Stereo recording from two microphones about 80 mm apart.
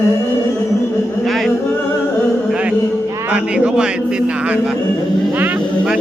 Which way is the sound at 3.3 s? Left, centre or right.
Centre.